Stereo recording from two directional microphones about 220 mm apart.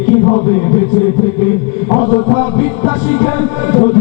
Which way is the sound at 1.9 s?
30° left (ahead or behind).